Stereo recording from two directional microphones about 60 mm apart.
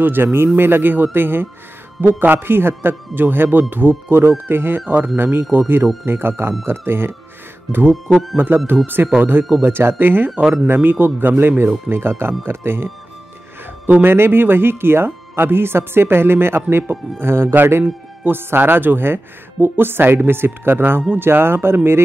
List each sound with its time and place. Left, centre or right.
0.0 s speech: right
7.9 s speech: centre
8.8 s speech: right
14.0 s speech: right
17.2 s a man's voice: right